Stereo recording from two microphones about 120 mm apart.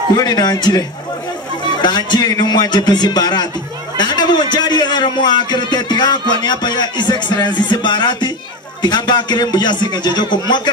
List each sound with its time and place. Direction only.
0.1 s a man's voice: 35° left (ahead or behind)